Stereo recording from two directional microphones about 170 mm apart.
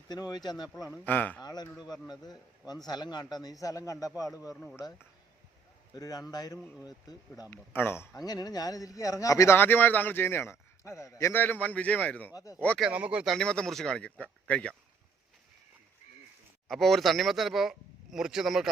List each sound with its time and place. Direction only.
0.1 s a man's voice: 25° left (ahead or behind)
0.9 s a man's voice: 10° left (ahead or behind)
1.4 s a man's voice: 25° left (ahead or behind)
5.9 s a man's voice: 20° left (ahead or behind)
7.5 s a man's voice: 10° left (ahead or behind)
12.9 s speech: 5° right (ahead or behind)
13.3 s speech: 5° left (ahead or behind)
16.6 s speech: centre (ahead or behind)